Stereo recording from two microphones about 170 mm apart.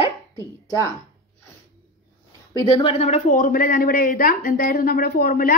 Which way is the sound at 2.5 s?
35° left (ahead or behind).